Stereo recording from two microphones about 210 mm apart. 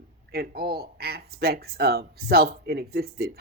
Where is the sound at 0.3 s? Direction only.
45° right (ahead or behind).